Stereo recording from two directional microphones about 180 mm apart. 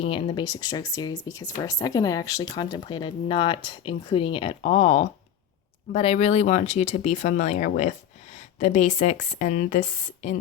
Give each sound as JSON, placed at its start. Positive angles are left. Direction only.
{"t": 0.0, "sound": "speech", "side_deg": 30}